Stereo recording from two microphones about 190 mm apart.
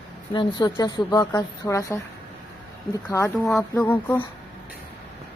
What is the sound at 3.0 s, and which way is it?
A woman's voice, 15° left (ahead or behind).